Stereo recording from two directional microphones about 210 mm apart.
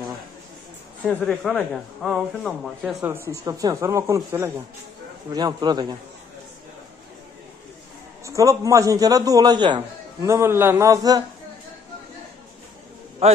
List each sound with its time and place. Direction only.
1.0 s speech: centre (ahead or behind)
3.3 s a man's voice: 15° right (ahead or behind)
8.3 s a man's voice: 15° right (ahead or behind)